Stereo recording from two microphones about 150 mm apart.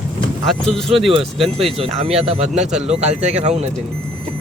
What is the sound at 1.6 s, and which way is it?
Speech, 40° right (ahead or behind).